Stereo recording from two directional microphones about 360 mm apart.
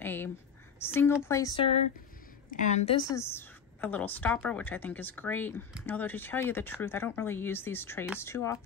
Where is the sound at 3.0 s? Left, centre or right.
Centre.